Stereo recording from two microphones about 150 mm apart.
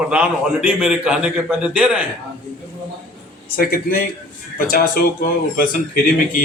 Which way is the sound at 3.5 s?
80° left.